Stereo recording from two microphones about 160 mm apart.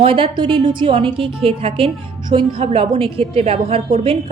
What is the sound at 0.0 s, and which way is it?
A woman's voice, 35° right (ahead or behind).